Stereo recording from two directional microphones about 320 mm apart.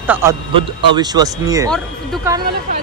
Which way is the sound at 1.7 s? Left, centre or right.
Centre.